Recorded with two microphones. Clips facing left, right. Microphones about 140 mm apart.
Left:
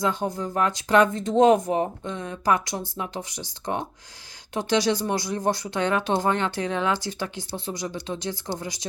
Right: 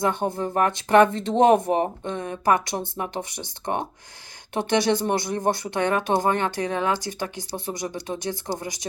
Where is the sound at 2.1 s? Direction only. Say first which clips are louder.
Right 2 dB; 55° right (ahead or behind).